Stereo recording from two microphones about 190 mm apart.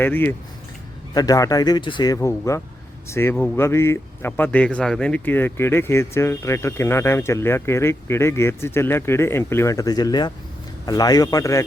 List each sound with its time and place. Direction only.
0.0 s speech: 10° left (ahead or behind)